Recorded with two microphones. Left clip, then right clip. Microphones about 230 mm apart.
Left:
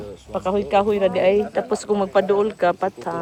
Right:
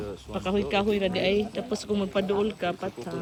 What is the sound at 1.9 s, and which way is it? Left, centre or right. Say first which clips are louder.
Speech: left 9 dB; left.